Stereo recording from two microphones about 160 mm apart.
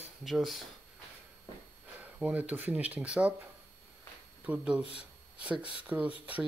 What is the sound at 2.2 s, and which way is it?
Speech, 10° right (ahead or behind).